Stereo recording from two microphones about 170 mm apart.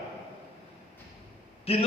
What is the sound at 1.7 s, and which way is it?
Speech, 35° left (ahead or behind).